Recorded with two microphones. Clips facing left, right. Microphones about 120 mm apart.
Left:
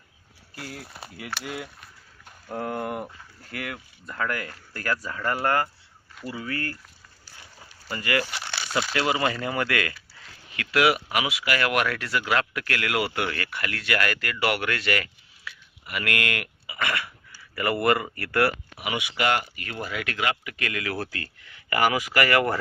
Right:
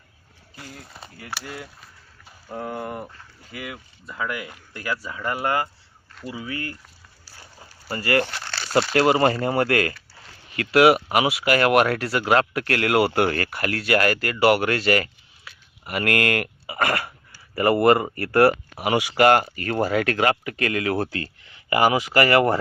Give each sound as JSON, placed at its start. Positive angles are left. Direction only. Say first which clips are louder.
{"t": 0.5, "sound": "speech", "louder": "left 3 dB", "side_deg": 5}
{"t": 1.5, "sound": "a sound", "louder": "left 2 dB", "side_deg": 5}
{"t": 3.4, "sound": "speech", "louder": "left 1 dB", "side_deg": -5}
{"t": 7.9, "sound": "speech", "louder": "right 5 dB", "side_deg": -35}
{"t": 8.3, "sound": "crumpling", "louder": "right 1 dB", "side_deg": 10}
{"t": 8.9, "sound": "speech", "louder": "right 7 dB", "side_deg": -45}